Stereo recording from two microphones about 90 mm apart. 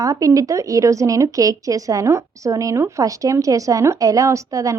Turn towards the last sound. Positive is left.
turn(degrees=-35)  # may be behind; listen again after turning